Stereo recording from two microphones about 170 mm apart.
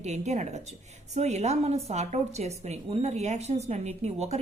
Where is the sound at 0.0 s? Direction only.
45° right (ahead or behind).